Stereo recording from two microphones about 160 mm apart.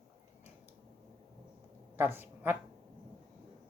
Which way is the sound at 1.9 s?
15° right (ahead or behind).